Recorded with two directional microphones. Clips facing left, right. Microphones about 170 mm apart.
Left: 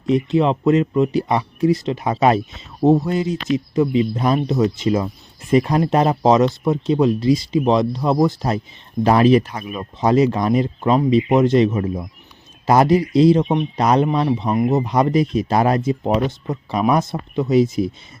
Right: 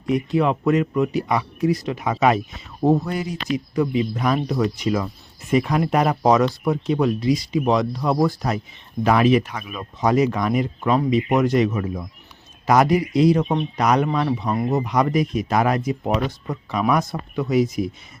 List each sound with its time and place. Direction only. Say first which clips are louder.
0.1 s speech: left 3 dB; 25° left (ahead or behind)
13.4 s speech: left 3 dB; 15° left (ahead or behind)
13.7 s speech: left 3 dB; 30° left (ahead or behind)